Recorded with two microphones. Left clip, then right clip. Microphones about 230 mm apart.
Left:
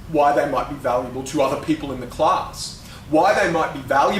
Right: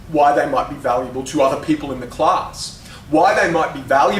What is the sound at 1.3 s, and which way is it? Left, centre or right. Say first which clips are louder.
Speech: right 4 dB; left.